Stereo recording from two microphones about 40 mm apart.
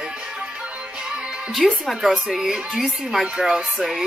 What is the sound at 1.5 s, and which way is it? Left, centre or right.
A woman's voice, centre.